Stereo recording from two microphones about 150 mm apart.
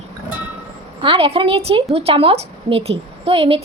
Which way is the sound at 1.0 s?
35° right (ahead or behind).